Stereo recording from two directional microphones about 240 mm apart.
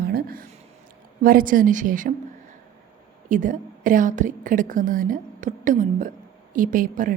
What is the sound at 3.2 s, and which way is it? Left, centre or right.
A woman's voice, right.